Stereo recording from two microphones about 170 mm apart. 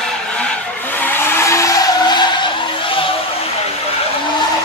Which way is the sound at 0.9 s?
10° left (ahead or behind).